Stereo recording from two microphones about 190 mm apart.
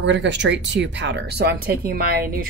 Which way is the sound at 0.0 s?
70° right (ahead or behind).